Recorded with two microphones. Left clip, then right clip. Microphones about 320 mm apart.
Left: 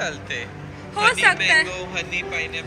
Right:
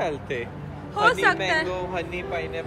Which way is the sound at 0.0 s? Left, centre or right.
Centre.